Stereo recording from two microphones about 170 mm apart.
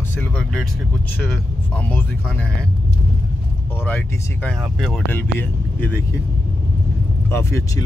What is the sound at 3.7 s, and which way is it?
Speech, 10° left (ahead or behind).